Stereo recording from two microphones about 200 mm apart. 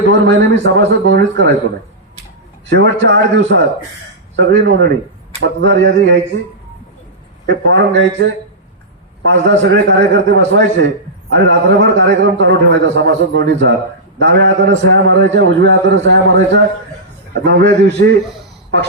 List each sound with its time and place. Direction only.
0.1 s a man's voice: 65° right (ahead or behind)
2.6 s a man's voice: 60° right (ahead or behind)
7.4 s a man's voice: 65° right (ahead or behind)
9.3 s a man's voice: 65° right (ahead or behind)